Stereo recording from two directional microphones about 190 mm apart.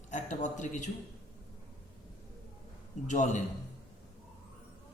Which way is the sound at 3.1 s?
40° left (ahead or behind).